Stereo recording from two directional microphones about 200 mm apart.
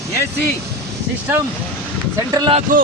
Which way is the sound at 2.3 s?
25° right (ahead or behind).